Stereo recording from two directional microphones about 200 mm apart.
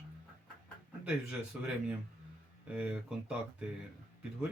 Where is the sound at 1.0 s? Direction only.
5° right (ahead or behind).